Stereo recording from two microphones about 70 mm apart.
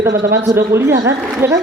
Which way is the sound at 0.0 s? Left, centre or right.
Right.